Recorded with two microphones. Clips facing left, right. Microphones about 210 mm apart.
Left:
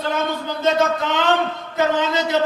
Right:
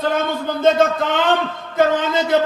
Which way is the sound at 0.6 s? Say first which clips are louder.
Right 3 dB; 50° right (ahead or behind).